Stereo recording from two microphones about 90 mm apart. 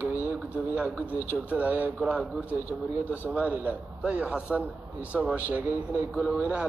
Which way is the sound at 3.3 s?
20° right (ahead or behind).